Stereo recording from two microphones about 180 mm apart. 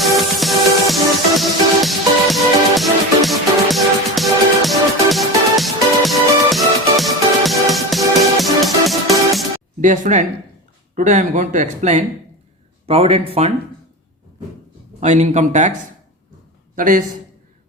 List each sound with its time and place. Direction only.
0.0 s music: centre (ahead or behind)
9.8 s speech: 45° right (ahead or behind)
15.0 s speech: 40° right (ahead or behind)
16.7 s a man's voice: 50° right (ahead or behind)